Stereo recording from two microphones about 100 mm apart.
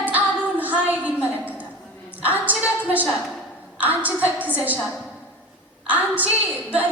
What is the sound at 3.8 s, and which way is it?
Speech, 15° right (ahead or behind).